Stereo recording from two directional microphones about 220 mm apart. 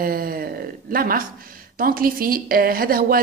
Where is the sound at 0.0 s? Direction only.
40° right (ahead or behind).